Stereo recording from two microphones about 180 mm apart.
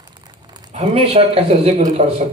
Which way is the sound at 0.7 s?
35° right (ahead or behind).